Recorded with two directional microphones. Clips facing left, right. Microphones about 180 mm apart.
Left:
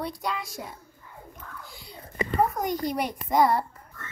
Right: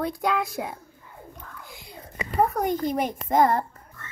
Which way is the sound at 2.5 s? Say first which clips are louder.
Right 3 dB; 55° right (ahead or behind).